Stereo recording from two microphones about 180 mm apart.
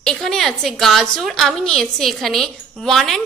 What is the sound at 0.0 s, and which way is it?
A woman's voice, 5° left (ahead or behind).